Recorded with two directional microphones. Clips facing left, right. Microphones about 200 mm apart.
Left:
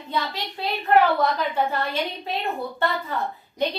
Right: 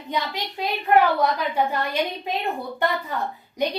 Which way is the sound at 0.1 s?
15° right (ahead or behind).